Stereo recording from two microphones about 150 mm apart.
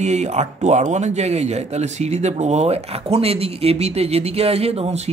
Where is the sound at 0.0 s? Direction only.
50° right (ahead or behind).